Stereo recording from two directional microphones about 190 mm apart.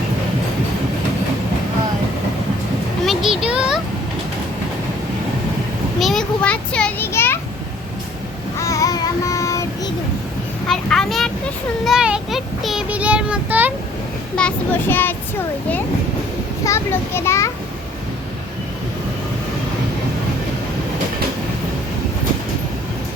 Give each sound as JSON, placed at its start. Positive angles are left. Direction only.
{"t": 3.1, "sound": "a sound", "side_deg": 0}
{"t": 6.0, "sound": "children playing", "side_deg": 0}
{"t": 8.5, "sound": "child singing", "side_deg": 15}
{"t": 10.7, "sound": "a sound", "side_deg": 0}
{"t": 11.9, "sound": "child singing", "side_deg": -5}
{"t": 14.3, "sound": "a child's voice", "side_deg": 10}